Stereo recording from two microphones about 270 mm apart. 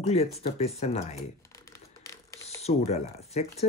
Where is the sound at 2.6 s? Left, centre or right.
Left.